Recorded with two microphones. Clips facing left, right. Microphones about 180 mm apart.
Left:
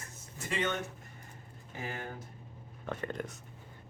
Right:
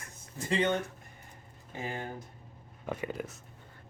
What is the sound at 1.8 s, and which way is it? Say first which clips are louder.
Speech: right 3 dB; 20° right (ahead or behind).